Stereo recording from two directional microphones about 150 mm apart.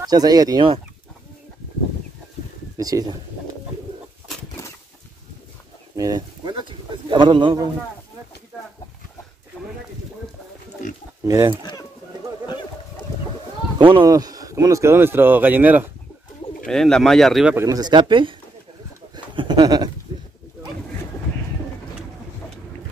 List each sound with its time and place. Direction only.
0.0 s speech: 25° right (ahead or behind)
2.8 s speech: 25° right (ahead or behind)
5.9 s a man's voice: 25° right (ahead or behind)
11.2 s speech: 20° right (ahead or behind)
13.7 s speech: 35° right (ahead or behind)
14.0 s speech: 25° right (ahead or behind)
16.6 s speech: 5° left (ahead or behind)
17.6 s speech: 25° right (ahead or behind)
19.1 s a sound: 30° right (ahead or behind)